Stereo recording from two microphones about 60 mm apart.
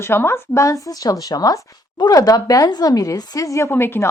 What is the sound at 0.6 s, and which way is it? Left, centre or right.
A woman's voice, left.